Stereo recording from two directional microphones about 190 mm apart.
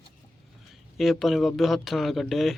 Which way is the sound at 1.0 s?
Centre (ahead or behind).